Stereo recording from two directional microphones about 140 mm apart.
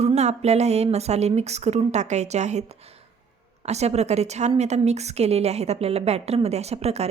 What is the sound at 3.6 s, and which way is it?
A woman's voice, 50° right (ahead or behind).